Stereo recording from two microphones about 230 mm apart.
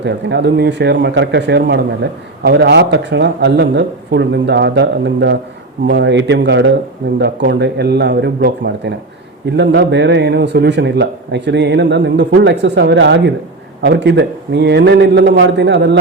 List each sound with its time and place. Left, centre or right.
0.0 s speech: right